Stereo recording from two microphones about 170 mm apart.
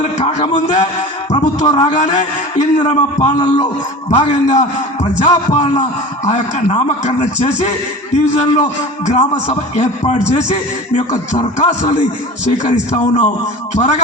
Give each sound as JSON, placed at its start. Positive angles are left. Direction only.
{"t": 0.0, "sound": "speech", "side_deg": 45}
{"t": 1.3, "sound": "a sound", "side_deg": 40}
{"t": 1.6, "sound": "a man's voice", "side_deg": 30}
{"t": 1.9, "sound": "a man's voice", "side_deg": 45}
{"t": 3.3, "sound": "speech", "side_deg": 25}
{"t": 4.1, "sound": "a man's voice", "side_deg": 40}